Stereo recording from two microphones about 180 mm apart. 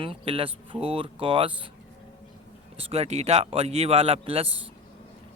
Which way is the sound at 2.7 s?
35° right (ahead or behind).